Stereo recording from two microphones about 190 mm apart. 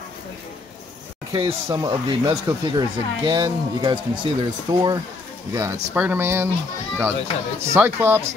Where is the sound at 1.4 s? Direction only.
25° right (ahead or behind).